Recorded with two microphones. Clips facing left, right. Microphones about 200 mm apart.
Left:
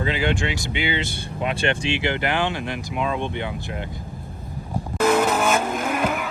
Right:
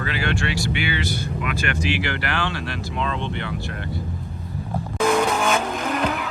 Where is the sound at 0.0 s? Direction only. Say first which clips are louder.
Left 2 dB; 20° left (ahead or behind).